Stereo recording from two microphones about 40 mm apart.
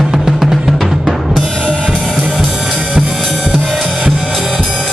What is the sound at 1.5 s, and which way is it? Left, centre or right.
Drum kit, centre.